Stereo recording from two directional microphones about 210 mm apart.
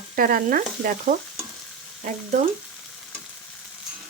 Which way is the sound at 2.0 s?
35° right (ahead or behind).